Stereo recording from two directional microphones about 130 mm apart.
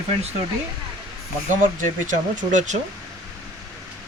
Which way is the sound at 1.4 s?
80° right.